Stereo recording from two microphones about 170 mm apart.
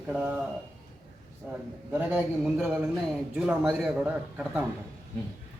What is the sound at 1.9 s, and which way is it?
A man's voice, 10° right (ahead or behind).